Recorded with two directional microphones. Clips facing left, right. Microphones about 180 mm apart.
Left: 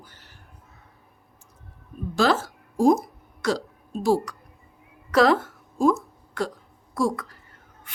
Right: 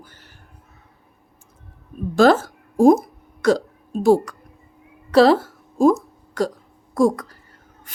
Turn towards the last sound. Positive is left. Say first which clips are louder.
# right 7 dB
turn(degrees=-45)  # may be behind; listen again after turning